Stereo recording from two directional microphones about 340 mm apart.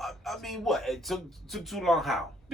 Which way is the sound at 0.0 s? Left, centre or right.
Centre.